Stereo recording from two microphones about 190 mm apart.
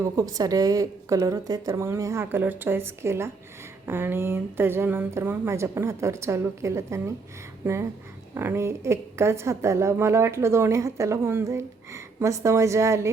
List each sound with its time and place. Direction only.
0.0 s a woman's voice: 20° right (ahead or behind)